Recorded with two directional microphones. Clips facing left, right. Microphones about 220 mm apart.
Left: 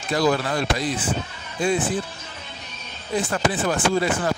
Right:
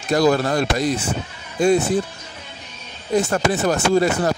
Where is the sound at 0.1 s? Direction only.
45° right (ahead or behind).